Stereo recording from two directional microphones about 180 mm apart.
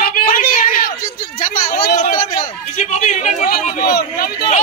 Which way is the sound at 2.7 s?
40° left (ahead or behind).